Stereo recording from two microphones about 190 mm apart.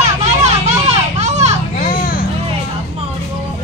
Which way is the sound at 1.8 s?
45° left (ahead or behind).